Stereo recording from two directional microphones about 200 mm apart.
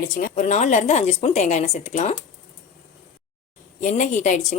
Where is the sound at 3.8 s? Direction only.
40° left (ahead or behind).